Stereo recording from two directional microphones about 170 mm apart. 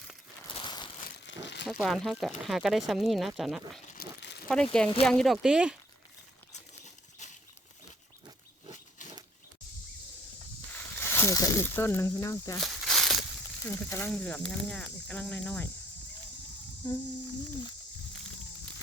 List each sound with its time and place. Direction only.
0.6 s crumpling: 25° left (ahead or behind)
1.3 s crumpling: 90° left
1.6 s speech: centre (ahead or behind)
3.9 s crumpling: 75° left (ahead or behind)
4.4 s speech: 5° left (ahead or behind)
6.5 s a sound: 45° left (ahead or behind)
10.7 s speech: 10° left (ahead or behind)
12.5 s a sound: centre (ahead or behind)
13.6 s speech: 15° left (ahead or behind)
14.1 s speech: 5° left (ahead or behind)
16.8 s a sound: 25° left (ahead or behind)